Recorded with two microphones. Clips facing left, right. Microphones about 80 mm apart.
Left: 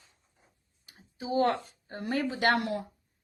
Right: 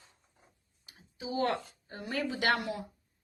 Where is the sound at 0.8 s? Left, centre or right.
Left.